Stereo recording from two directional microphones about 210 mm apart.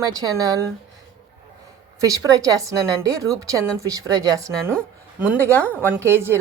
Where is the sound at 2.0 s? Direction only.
15° right (ahead or behind).